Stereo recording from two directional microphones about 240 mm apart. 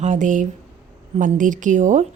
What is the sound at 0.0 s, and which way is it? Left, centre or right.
Speech, right.